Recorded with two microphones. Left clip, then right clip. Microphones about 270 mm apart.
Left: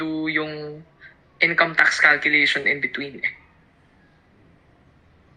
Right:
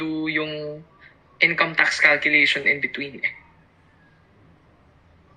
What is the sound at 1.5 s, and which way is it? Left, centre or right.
Speech, centre.